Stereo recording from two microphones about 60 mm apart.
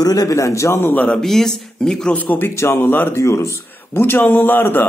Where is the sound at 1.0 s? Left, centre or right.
Centre.